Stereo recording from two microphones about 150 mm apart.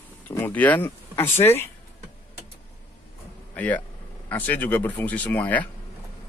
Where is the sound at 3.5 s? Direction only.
10° left (ahead or behind).